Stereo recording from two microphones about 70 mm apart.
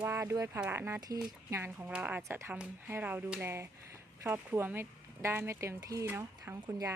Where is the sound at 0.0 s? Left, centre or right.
Right.